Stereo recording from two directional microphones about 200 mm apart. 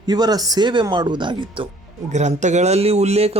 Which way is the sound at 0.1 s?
20° right (ahead or behind).